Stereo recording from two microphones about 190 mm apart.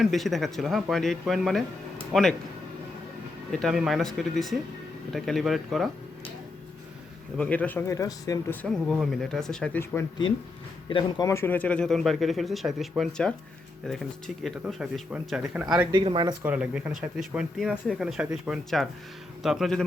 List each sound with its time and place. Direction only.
0.0 s speech: centre (ahead or behind)
3.5 s speech: centre (ahead or behind)
7.3 s speech: 5° left (ahead or behind)
8.6 s speech: centre (ahead or behind)
10.8 s speech: 20° left (ahead or behind); by 15.9 s 5° right (ahead or behind)
15.9 s speech: 25° right (ahead or behind)
16.4 s speech: 5° right (ahead or behind)